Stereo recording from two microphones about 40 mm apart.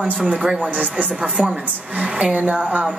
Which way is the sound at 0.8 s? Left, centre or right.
Right.